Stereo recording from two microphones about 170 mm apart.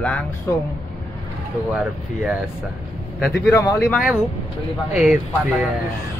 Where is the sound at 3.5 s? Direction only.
20° left (ahead or behind).